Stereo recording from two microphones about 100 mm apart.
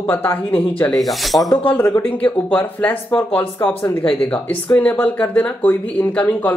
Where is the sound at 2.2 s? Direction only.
15° left (ahead or behind).